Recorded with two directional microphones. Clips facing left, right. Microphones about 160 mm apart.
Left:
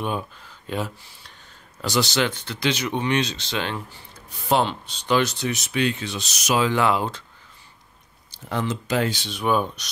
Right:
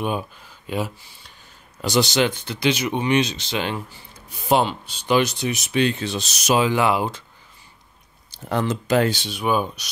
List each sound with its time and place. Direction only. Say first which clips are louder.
0.0 s speech: right 2 dB; 10° right (ahead or behind)
5.7 s speech: right 5 dB; 30° right (ahead or behind)
6.6 s speech: left 1 dB; 10° right (ahead or behind)
8.5 s speech: right 4 dB; 50° right (ahead or behind)
9.3 s speech: even; 5° right (ahead or behind)